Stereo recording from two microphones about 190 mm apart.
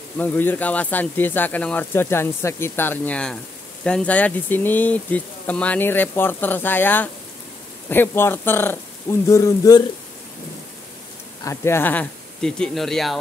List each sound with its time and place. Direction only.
0.2 s speech: 10° left (ahead or behind)
11.4 s speech: 15° left (ahead or behind)